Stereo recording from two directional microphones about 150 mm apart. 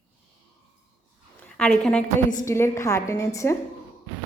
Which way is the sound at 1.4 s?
5° left (ahead or behind).